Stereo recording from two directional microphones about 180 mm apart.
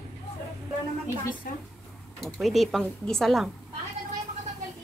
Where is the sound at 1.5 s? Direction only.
55° left (ahead or behind).